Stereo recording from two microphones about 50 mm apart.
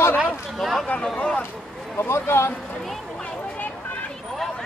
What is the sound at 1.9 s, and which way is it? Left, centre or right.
Speech, left.